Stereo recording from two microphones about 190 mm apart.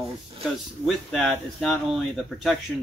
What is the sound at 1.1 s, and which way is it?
Speech, centre (ahead or behind).